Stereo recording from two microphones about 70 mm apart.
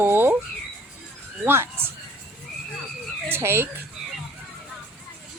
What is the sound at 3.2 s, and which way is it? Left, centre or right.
Speech, right.